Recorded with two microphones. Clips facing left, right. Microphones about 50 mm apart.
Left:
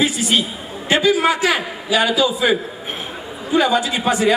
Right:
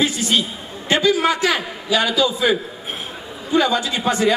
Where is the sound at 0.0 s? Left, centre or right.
Centre.